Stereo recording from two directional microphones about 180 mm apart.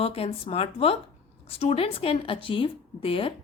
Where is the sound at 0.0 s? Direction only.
35° left (ahead or behind).